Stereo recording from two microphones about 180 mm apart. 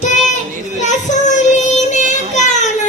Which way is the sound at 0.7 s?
40° left (ahead or behind).